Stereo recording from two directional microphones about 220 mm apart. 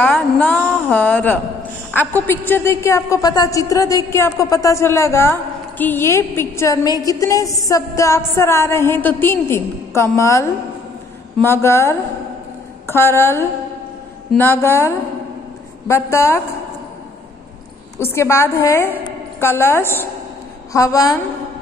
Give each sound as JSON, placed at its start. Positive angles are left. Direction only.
{"t": 0.0, "sound": "a woman's voice", "side_deg": 5}
{"t": 17.9, "sound": "a woman's voice", "side_deg": 10}